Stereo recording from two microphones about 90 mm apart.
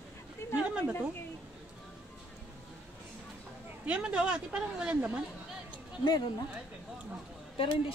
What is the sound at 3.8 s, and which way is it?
Speech, 15° right (ahead or behind).